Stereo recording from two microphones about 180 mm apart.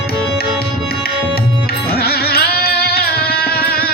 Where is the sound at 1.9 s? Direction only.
60° left (ahead or behind).